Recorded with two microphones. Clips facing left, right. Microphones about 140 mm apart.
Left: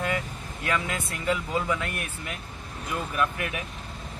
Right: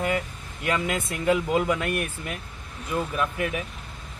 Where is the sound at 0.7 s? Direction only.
20° right (ahead or behind).